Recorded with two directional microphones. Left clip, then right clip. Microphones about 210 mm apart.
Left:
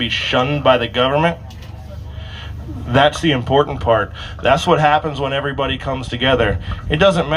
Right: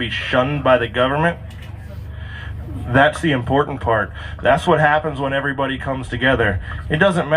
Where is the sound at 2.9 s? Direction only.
45° left (ahead or behind).